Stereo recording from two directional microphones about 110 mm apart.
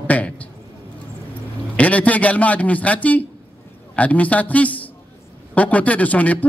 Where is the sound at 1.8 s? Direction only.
15° left (ahead or behind).